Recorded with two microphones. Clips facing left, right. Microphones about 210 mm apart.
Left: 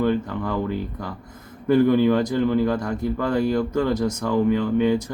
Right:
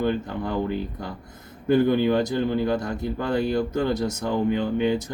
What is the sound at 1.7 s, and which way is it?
Speech, 25° right (ahead or behind).